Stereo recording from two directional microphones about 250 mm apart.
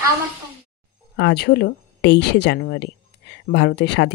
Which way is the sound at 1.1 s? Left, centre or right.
Left.